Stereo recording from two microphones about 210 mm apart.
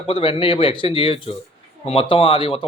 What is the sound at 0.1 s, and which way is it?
Speech, 25° left (ahead or behind).